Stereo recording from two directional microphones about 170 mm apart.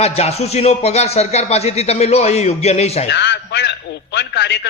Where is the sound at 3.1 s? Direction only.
85° left.